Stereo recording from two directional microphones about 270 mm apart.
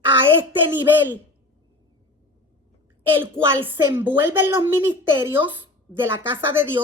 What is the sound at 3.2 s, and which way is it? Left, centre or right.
A woman's voice, centre.